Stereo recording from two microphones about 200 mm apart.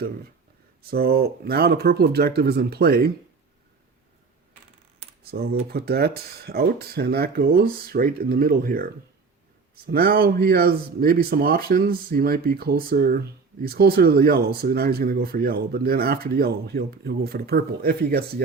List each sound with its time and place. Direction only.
0.8 s speech: 50° right (ahead or behind)
5.3 s speech: 50° right (ahead or behind)